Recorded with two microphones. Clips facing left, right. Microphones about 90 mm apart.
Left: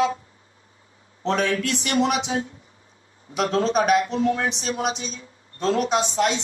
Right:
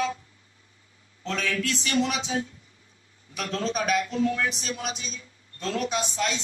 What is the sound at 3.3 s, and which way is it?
Speech, 30° left (ahead or behind).